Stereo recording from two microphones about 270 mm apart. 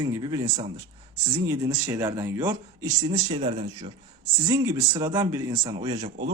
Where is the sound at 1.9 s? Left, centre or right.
Centre.